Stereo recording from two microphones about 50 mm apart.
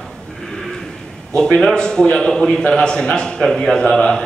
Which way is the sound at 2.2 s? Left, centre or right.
Centre.